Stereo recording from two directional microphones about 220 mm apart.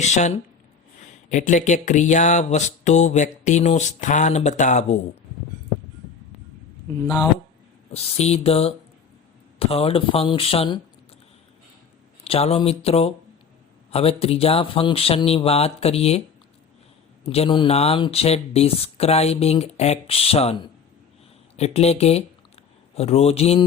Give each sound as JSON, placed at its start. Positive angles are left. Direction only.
{"t": 0.0, "sound": "speech", "side_deg": 30}
{"t": 7.9, "sound": "speech", "side_deg": 30}
{"t": 12.2, "sound": "speech", "side_deg": 25}
{"t": 17.2, "sound": "speech", "side_deg": 25}